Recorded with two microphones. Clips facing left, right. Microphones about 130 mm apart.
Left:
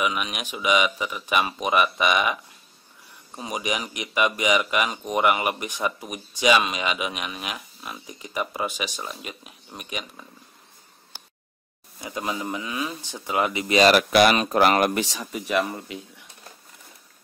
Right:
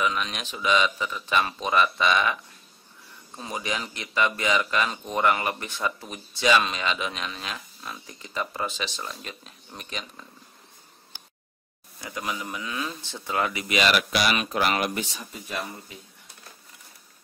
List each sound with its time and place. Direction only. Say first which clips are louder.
0.0 s speech: left 1 dB; 10° left (ahead or behind)
3.3 s speech: left 3 dB; 15° left (ahead or behind)
12.0 s speech: left 3 dB; 20° left (ahead or behind); by 14.9 s 45° left (ahead or behind)
15.0 s speech: left 6 dB; 85° left